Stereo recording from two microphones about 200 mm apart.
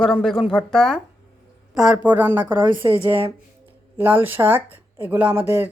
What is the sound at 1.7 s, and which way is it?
Speech, 5° right (ahead or behind).